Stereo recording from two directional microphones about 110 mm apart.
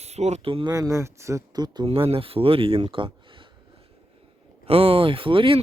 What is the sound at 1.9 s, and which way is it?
Speech, 60° right (ahead or behind).